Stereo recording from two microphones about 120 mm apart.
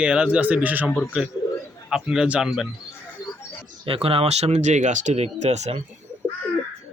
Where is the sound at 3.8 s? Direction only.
50° right (ahead or behind); by 5.8 s 70° right (ahead or behind).